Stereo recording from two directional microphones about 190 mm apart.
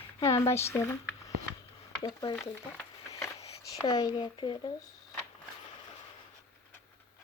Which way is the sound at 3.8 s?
20° left (ahead or behind).